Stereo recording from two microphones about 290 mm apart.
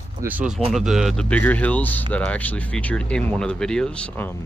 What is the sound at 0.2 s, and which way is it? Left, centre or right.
Speech, centre.